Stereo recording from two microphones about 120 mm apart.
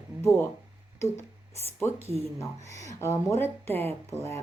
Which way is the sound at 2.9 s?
20° left (ahead or behind).